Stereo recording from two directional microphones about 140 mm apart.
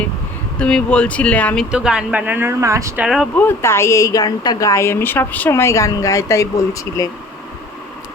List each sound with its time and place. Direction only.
0.6 s speech: 10° left (ahead or behind)
1.7 s speech: 5° right (ahead or behind); by 3.0 s 20° right (ahead or behind)
3.0 s speech: 5° right (ahead or behind)
3.3 s a woman's voice: 15° left (ahead or behind)